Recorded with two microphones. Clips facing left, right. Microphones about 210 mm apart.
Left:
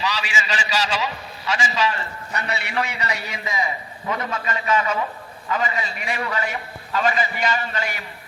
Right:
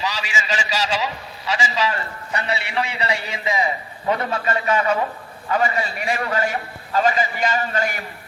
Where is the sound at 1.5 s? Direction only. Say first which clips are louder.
Even; 35° right (ahead or behind).